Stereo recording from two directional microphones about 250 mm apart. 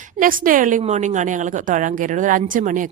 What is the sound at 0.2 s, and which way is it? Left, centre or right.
A woman's voice, right.